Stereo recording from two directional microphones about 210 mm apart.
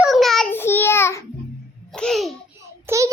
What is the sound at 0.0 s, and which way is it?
Child singing, centre (ahead or behind).